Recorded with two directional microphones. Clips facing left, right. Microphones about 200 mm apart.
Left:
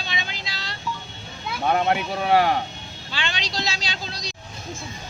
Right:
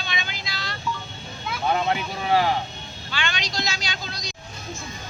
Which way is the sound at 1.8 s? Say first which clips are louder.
Left 3 dB; 55° left (ahead or behind).